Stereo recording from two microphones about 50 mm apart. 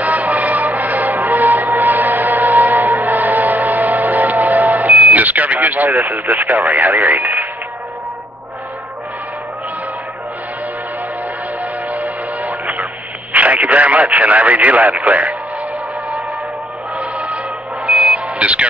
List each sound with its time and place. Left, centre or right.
0.0 s music: right
6.0 s speech: right
11.9 s music: right
13.3 s speech: right
17.0 s music: right
17.8 s a sound: right